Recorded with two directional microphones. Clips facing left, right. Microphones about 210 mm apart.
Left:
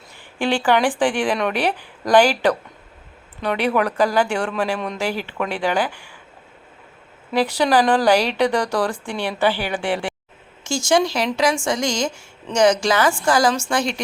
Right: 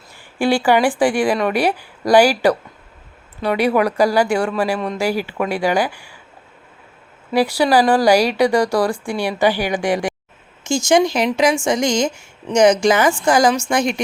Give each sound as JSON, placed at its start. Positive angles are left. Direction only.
{"t": 0.3, "sound": "speech", "side_deg": -10}
{"t": 7.3, "sound": "speech", "side_deg": -10}